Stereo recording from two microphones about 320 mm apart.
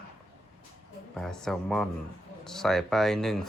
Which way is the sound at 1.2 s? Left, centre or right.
Centre.